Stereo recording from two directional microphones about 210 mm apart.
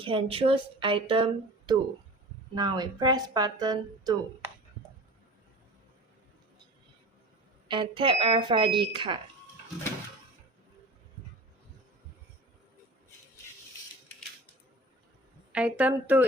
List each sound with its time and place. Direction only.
0.0 s speech: 25° right (ahead or behind)
7.7 s speech: 25° right (ahead or behind)
15.5 s a woman's voice: 5° right (ahead or behind)